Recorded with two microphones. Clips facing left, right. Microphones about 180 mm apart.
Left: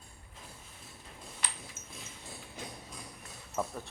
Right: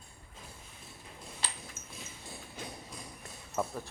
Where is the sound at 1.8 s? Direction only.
40° right (ahead or behind).